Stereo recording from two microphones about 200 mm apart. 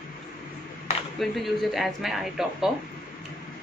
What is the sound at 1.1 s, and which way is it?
A woman's voice, centre (ahead or behind).